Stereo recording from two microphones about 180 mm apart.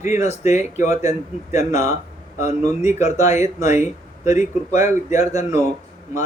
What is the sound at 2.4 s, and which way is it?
Speech, 40° left (ahead or behind).